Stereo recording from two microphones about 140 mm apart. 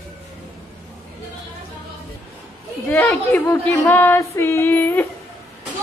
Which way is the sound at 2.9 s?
15° left (ahead or behind).